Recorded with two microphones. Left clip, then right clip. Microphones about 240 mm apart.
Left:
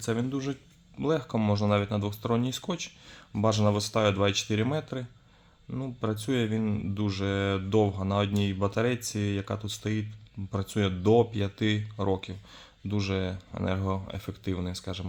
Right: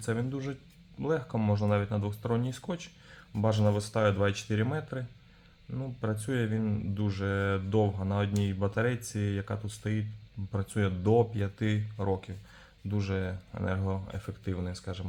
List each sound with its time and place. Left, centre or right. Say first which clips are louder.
0.0 s speech: left 3 dB; left